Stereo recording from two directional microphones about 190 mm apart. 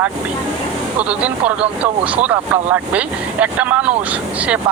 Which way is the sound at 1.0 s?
5° right (ahead or behind).